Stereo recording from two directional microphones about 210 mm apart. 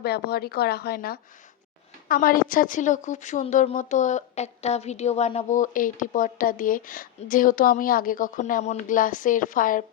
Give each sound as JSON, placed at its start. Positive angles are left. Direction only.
{"t": 0.0, "sound": "a woman's voice", "side_deg": 50}